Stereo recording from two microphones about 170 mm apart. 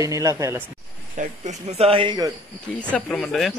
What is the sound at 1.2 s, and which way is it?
Speech, 40° right (ahead or behind).